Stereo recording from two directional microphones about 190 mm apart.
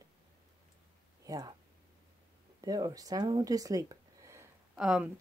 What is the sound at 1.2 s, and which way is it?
Speech, 20° right (ahead or behind).